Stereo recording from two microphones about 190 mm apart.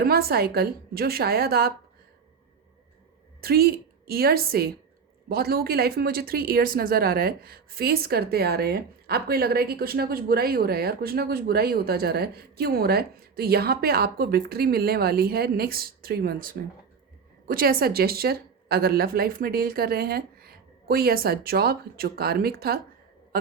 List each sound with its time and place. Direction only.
0.0 s speech: 55° right (ahead or behind)
3.4 s speech: 55° right (ahead or behind)
23.3 s a sound: 50° right (ahead or behind)